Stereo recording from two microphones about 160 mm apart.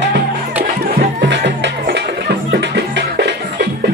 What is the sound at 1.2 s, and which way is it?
Music, 90° right.